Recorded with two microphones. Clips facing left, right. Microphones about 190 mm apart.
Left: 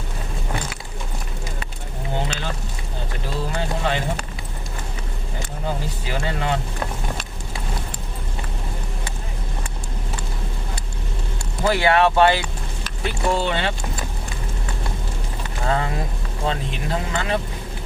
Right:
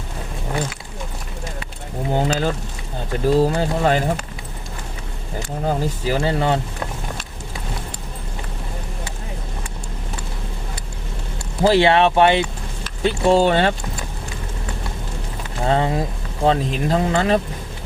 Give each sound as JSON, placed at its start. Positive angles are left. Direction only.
{"t": 2.1, "sound": "a sound", "side_deg": -40}
{"t": 5.6, "sound": "speech", "side_deg": -35}
{"t": 11.6, "sound": "speech", "side_deg": -30}
{"t": 13.4, "sound": "speech", "side_deg": -45}
{"t": 15.6, "sound": "speech", "side_deg": -30}